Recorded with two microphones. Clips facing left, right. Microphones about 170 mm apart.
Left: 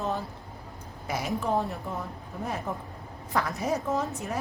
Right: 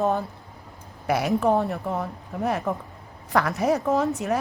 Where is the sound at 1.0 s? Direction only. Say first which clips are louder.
Right 8 dB; 70° right (ahead or behind).